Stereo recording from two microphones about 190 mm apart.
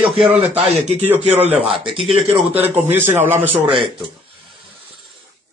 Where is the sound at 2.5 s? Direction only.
10° right (ahead or behind).